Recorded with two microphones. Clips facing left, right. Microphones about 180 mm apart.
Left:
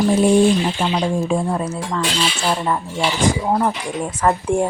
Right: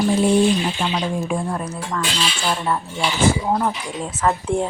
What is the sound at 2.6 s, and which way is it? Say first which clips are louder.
Speech: left 2 dB; 10° left (ahead or behind).